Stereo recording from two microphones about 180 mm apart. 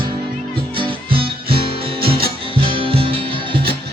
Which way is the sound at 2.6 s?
30° right (ahead or behind).